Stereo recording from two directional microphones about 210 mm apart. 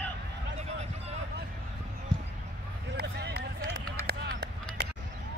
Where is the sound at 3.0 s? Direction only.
50° right (ahead or behind).